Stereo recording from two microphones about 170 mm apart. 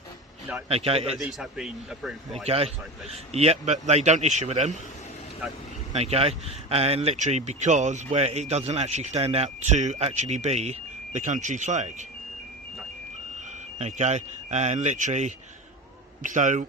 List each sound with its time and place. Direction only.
0.7 s speech: 35° right (ahead or behind)
1.2 s a man's voice: centre (ahead or behind)
2.5 s speech: 35° right (ahead or behind)
5.9 s speech: 35° right (ahead or behind)
13.7 s speech: 40° right (ahead or behind)